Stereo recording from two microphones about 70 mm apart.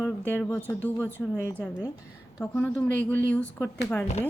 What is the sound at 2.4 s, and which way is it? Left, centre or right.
A woman's voice, left.